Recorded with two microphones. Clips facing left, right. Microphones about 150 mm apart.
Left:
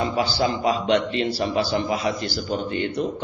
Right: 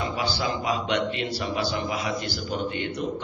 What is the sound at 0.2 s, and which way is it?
A man's voice, 35° left (ahead or behind).